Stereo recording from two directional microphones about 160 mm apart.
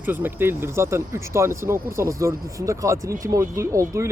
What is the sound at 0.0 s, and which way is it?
Speech, 10° right (ahead or behind).